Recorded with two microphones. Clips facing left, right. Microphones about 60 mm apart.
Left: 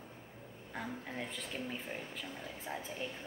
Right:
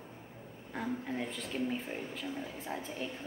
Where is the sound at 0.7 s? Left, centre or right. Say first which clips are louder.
Right 5 dB; centre.